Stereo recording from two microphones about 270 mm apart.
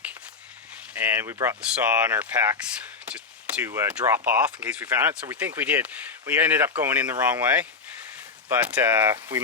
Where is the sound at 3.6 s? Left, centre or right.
Centre.